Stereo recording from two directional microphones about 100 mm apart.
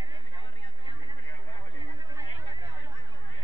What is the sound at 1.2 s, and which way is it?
Chatter, 50° left (ahead or behind).